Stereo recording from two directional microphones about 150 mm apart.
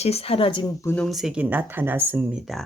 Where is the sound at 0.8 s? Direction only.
10° left (ahead or behind).